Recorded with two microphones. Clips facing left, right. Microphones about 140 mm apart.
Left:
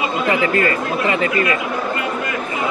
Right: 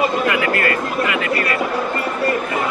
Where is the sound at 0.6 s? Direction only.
30° left (ahead or behind).